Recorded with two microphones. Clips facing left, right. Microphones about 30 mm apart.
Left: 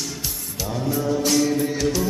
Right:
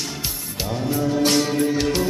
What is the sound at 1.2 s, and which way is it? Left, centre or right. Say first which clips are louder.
Music: right 1 dB; right.